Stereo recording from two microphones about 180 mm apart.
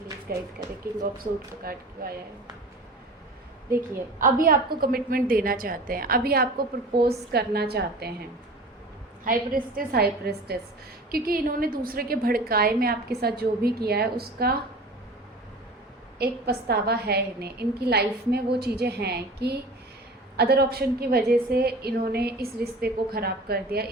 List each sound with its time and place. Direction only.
0.3 s a woman's voice: 55° right (ahead or behind)
1.6 s a woman's voice: 55° right (ahead or behind)
4.2 s a woman's voice: 50° right (ahead or behind)
9.2 s a woman's voice: 50° right (ahead or behind)
16.1 s a woman's voice: 60° right (ahead or behind)